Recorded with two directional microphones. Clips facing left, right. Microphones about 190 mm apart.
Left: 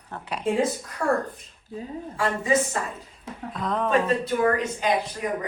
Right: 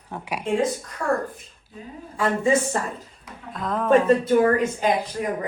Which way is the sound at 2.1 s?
25° right (ahead or behind).